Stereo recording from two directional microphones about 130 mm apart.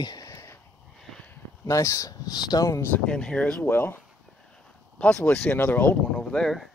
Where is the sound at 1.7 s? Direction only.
25° left (ahead or behind).